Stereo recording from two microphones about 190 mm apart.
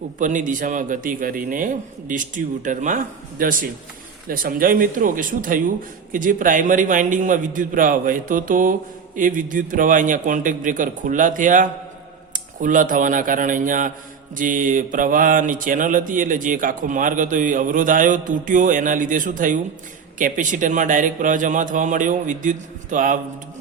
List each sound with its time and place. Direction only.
0.2 s mantra: 40° right (ahead or behind)